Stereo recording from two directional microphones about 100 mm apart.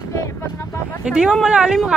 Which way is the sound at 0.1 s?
30° left (ahead or behind).